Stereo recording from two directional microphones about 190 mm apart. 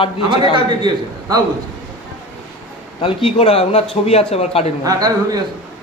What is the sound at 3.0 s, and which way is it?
Speech, 30° left (ahead or behind).